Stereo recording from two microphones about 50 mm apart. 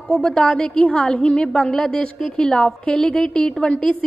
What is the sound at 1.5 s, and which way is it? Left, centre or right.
A woman's voice, centre.